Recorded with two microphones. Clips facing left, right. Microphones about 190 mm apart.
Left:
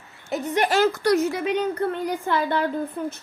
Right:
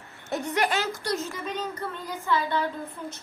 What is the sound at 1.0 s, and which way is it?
A woman's voice, 70° left (ahead or behind).